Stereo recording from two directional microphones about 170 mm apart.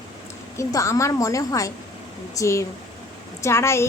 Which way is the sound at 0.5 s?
20° left (ahead or behind).